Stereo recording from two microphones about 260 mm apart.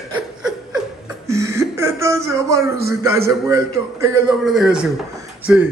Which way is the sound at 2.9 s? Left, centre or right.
Centre.